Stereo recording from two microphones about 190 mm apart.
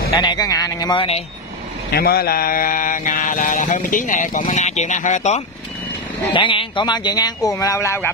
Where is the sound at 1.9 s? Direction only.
55° left (ahead or behind); by 5.4 s 40° left (ahead or behind).